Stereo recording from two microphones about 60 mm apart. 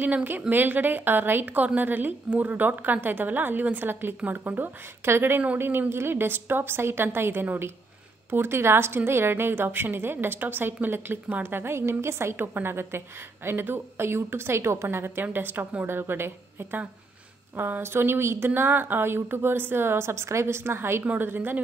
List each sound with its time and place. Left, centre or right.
0.0 s a woman's voice: right
5.0 s a woman's voice: right
21.0 s speech: right
21.3 s a woman's voice: right